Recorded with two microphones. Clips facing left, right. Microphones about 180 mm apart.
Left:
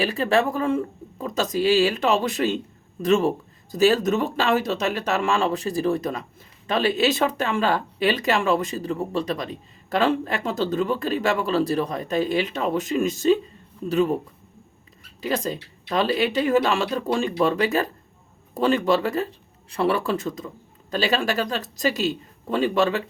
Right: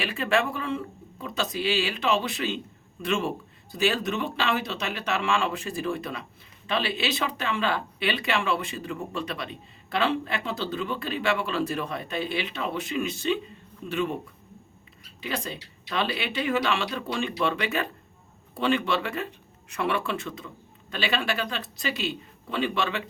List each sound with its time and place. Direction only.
0.0 s speech: 40° left (ahead or behind)
15.2 s speech: 40° left (ahead or behind)